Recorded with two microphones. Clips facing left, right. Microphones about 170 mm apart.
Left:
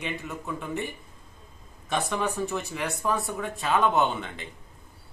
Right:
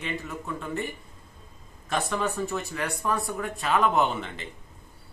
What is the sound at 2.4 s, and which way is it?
Speech, 20° left (ahead or behind).